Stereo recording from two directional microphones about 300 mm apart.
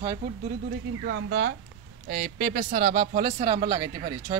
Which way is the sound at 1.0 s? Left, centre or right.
Right.